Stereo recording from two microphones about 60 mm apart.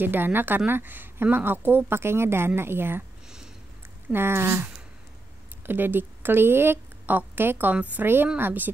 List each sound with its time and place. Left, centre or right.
0.0 s speech: right
4.1 s speech: right
5.7 s a woman's voice: right